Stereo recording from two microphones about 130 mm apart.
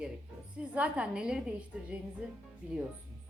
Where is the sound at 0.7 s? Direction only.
10° right (ahead or behind).